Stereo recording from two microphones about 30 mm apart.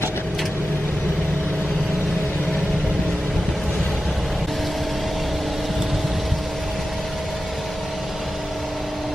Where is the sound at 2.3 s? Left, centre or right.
Left.